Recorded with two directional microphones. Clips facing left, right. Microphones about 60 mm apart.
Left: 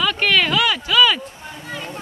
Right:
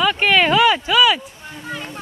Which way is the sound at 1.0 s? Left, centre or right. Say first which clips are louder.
Left 1 dB; centre.